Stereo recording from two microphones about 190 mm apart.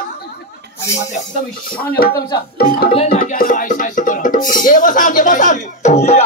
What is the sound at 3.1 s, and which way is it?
A woman's voice, 45° left (ahead or behind).